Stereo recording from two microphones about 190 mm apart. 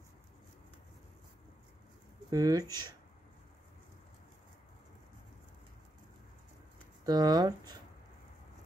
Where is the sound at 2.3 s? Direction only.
20° right (ahead or behind).